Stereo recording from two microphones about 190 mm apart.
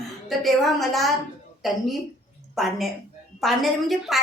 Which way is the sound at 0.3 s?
Centre (ahead or behind).